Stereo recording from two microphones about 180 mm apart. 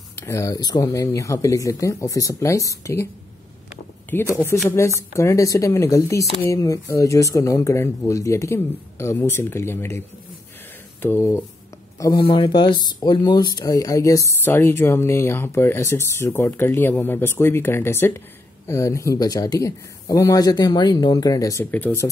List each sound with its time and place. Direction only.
0.2 s speech: 15° left (ahead or behind)
4.1 s speech: 15° left (ahead or behind)
12.0 s speech: 25° left (ahead or behind)